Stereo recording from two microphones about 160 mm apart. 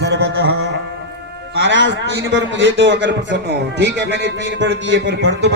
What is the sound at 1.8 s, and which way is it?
A man's voice, 90° right.